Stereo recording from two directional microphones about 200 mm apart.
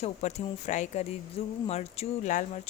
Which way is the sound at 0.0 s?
35° left (ahead or behind).